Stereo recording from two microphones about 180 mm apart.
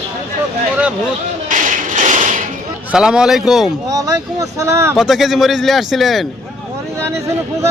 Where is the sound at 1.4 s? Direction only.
45° right (ahead or behind).